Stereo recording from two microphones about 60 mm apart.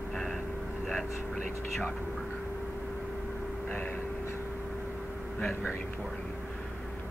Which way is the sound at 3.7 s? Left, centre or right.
Left.